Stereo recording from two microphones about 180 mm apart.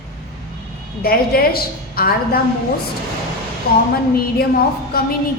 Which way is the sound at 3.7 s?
55° left (ahead or behind).